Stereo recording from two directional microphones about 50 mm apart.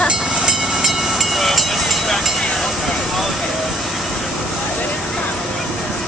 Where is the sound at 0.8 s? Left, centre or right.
Centre.